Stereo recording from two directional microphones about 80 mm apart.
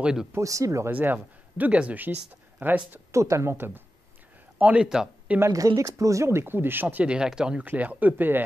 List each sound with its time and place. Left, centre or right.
0.0 s speech: centre
0.4 s speech: right
0.9 s speech: right
3.1 s speech: right
4.6 s a man's voice: centre
4.8 s speech: centre
5.8 s speech: right; by 7.6 s centre
7.6 s speech: centre